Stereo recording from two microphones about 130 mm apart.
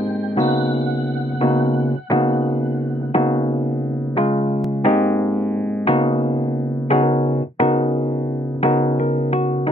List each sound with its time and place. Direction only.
0.4 s music: 30° left (ahead or behind)
1.6 s electric piano: 25° left (ahead or behind)
4.8 s electric piano: 15° left (ahead or behind)
5.9 s music: 50° left (ahead or behind)
7.5 s keyboard: 55° left (ahead or behind)
8.6 s music: 25° left (ahead or behind)